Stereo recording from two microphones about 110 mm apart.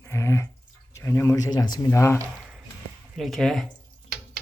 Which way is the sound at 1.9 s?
25° left (ahead or behind).